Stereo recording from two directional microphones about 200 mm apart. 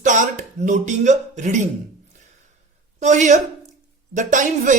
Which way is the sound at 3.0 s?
35° right (ahead or behind).